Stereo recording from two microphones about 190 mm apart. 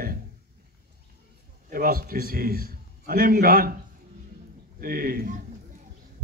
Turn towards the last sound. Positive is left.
turn(degrees=-50)  # may be behind; listen again after turning